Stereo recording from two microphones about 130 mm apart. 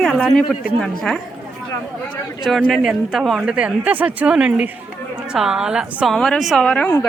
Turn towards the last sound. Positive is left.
turn(degrees=5)  # may be behind; listen again after turning